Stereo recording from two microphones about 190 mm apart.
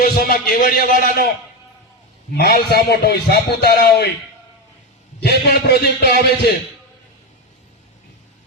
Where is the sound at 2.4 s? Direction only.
55° left (ahead or behind).